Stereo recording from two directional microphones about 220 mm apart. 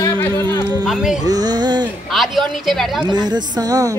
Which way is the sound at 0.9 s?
5° right (ahead or behind).